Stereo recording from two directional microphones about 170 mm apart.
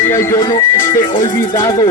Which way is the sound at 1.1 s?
20° left (ahead or behind).